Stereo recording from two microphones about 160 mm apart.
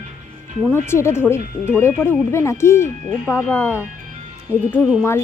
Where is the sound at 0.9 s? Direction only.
15° left (ahead or behind).